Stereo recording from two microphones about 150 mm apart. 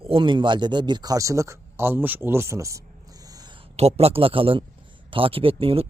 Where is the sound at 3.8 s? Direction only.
45° right (ahead or behind).